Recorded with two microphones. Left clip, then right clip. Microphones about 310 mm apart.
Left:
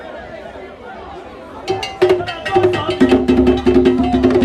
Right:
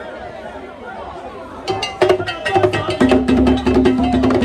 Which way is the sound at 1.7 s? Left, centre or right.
Centre.